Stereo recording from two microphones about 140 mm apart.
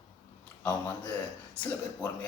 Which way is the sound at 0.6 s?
10° left (ahead or behind).